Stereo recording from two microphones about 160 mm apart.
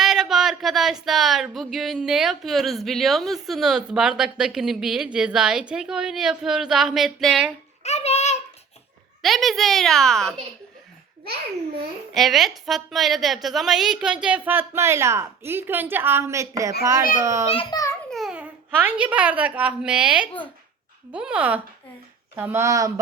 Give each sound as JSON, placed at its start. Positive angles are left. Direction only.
{"t": 0.0, "sound": "speech", "side_deg": -5}
{"t": 7.9, "sound": "a sound", "side_deg": 45}
{"t": 9.2, "sound": "speech", "side_deg": 0}
{"t": 12.1, "sound": "a woman's voice", "side_deg": 0}
{"t": 17.5, "sound": "a child's voice", "side_deg": 35}
{"t": 18.1, "sound": "a child's voice", "side_deg": 0}